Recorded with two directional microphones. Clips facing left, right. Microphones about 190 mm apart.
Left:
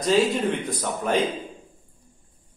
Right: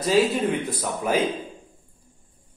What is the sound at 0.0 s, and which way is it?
Speech, 5° right (ahead or behind).